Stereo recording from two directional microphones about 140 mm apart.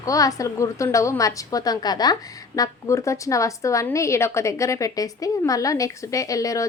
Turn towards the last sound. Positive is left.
turn(degrees=25)  # may be behind; listen again after turning